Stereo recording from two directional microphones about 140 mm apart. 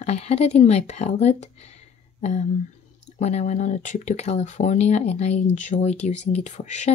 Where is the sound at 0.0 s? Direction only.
50° left (ahead or behind).